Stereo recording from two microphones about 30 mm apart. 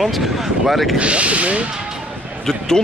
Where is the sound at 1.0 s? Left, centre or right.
Right.